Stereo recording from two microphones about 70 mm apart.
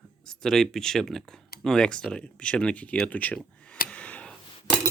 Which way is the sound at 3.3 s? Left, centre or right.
Centre.